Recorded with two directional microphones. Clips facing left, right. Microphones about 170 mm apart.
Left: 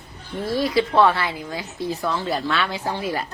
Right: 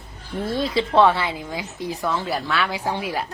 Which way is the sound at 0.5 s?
25° right (ahead or behind).